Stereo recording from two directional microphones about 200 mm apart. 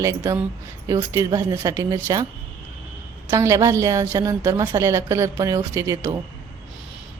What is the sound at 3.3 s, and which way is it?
A woman's voice, 15° right (ahead or behind).